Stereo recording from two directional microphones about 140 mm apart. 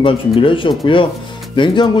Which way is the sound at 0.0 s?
40° left (ahead or behind).